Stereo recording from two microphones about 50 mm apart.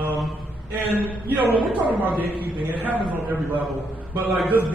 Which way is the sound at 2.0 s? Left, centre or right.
Right.